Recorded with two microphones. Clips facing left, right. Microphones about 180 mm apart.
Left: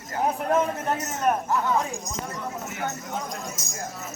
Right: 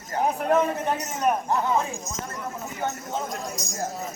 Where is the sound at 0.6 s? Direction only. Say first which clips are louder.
Right 1 dB; centre (ahead or behind).